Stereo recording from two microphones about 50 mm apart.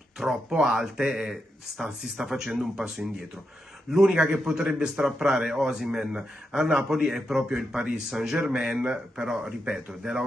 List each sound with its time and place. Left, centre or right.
0.5 s a man's voice: centre
3.9 s a man's voice: centre